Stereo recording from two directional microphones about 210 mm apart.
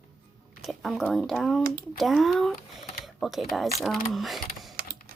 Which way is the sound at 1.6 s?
45° right (ahead or behind).